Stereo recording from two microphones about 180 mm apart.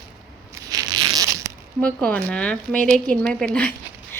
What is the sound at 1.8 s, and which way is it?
Speech, 5° left (ahead or behind).